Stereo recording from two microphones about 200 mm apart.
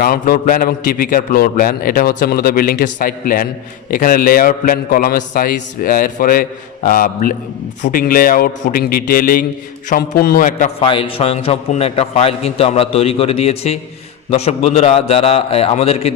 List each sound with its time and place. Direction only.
0.0 s a man's voice: 45° left (ahead or behind)
10.8 s a man's voice: 25° left (ahead or behind)